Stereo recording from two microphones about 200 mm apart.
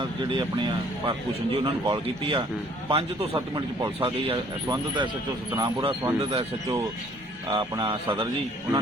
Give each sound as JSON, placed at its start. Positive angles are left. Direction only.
{"t": 0.0, "sound": "speech", "side_deg": -25}